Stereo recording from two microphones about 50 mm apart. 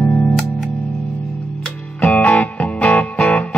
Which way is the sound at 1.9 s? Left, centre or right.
Left.